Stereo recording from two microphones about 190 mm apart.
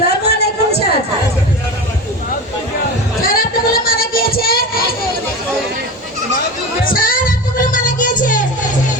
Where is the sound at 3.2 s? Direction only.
50° left (ahead or behind).